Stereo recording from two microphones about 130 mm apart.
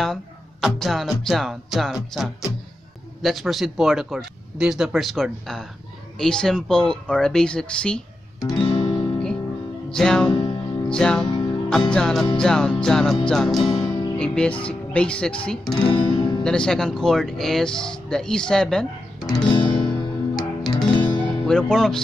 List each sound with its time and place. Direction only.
0.0 s speech: centre (ahead or behind)
3.2 s speech: centre (ahead or behind)
8.5 s music: 35° left (ahead or behind)
9.8 s music: 5° left (ahead or behind)
10.3 s music: 35° left (ahead or behind)
10.9 s speech: 5° left (ahead or behind)
11.2 s music: 35° left (ahead or behind)
11.9 s speech: 5° left (ahead or behind)
13.7 s music: 35° left (ahead or behind)
14.1 s speech: 5° left (ahead or behind)
15.7 s guitar: 35° left (ahead or behind)
16.4 s speech: 5° left (ahead or behind)
19.1 s music: 30° left (ahead or behind)
21.5 s speech: 5° left (ahead or behind)